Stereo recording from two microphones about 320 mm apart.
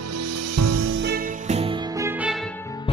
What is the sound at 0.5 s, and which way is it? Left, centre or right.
Music, right.